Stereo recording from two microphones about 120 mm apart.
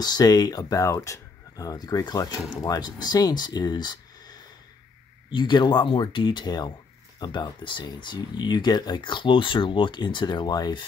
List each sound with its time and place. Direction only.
0.0 s speech: 35° left (ahead or behind)